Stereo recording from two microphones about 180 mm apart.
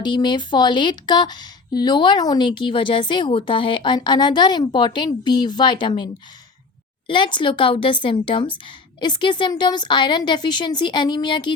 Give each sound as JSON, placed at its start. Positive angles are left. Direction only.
{"t": 0.0, "sound": "speech", "side_deg": 25}
{"t": 7.1, "sound": "speech", "side_deg": 25}